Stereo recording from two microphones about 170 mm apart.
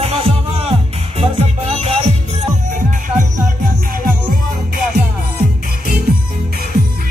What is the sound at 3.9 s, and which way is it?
Music, 55° right (ahead or behind).